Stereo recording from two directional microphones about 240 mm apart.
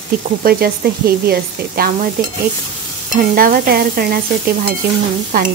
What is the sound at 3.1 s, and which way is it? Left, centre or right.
Speech, right.